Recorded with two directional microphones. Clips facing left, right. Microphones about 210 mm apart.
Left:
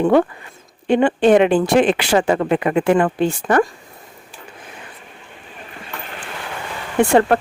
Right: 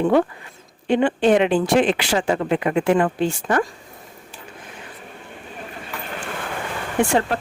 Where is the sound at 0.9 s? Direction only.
55° left (ahead or behind).